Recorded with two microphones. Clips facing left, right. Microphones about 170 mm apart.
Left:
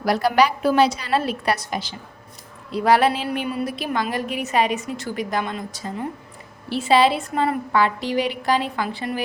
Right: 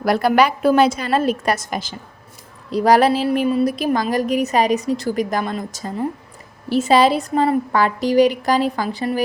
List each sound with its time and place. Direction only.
0.0 s a woman's voice: 50° right (ahead or behind)